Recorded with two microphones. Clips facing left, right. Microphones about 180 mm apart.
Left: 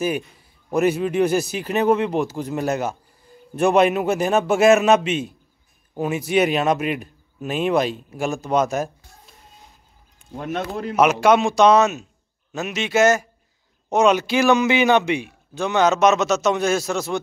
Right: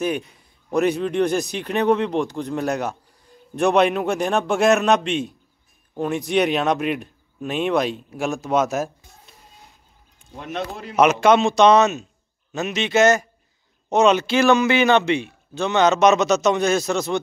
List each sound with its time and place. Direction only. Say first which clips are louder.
0.7 s speech: left 1 dB; 5° left (ahead or behind)
10.3 s speech: left 3 dB; 45° left (ahead or behind)
11.0 s a man's voice: right 1 dB; 10° left (ahead or behind)